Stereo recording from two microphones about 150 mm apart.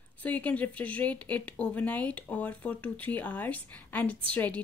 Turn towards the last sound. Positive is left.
turn(degrees=10)  # may be behind; listen again after turning